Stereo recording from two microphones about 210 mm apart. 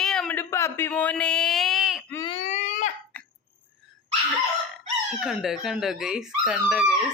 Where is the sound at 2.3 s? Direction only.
30° left (ahead or behind).